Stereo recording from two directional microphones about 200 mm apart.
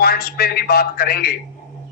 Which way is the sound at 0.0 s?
50° left (ahead or behind).